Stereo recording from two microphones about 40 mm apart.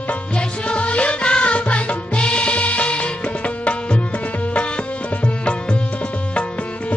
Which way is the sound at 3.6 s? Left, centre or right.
Left.